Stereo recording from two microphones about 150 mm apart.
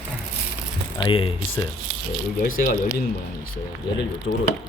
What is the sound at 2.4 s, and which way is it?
Speech, 70° left (ahead or behind).